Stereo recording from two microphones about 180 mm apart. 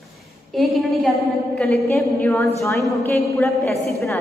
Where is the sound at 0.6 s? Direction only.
Centre (ahead or behind).